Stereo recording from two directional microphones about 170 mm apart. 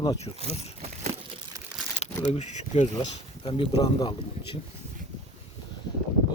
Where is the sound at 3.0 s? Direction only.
30° left (ahead or behind).